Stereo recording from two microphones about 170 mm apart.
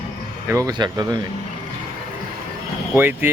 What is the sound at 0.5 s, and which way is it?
Speech, 20° right (ahead or behind).